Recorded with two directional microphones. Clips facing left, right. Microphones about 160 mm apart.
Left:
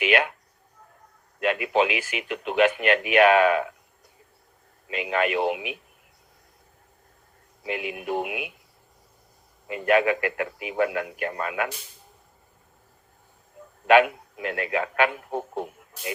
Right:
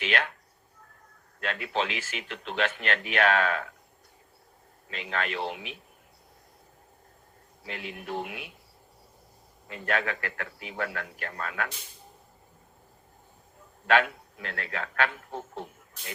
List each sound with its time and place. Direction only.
0.0 s speech: 10° left (ahead or behind)
1.4 s speech: 15° left (ahead or behind)
4.9 s speech: 10° left (ahead or behind)
7.6 s speech: 15° left (ahead or behind)
9.6 s speech: 10° left (ahead or behind)
13.8 s speech: 15° left (ahead or behind)
15.3 s a man's voice: 50° left (ahead or behind)